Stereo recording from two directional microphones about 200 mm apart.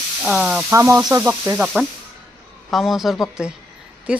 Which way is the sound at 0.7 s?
15° right (ahead or behind).